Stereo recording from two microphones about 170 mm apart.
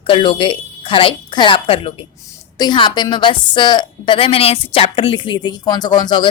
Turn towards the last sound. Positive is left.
turn(degrees=25)  # may be behind; listen again after turning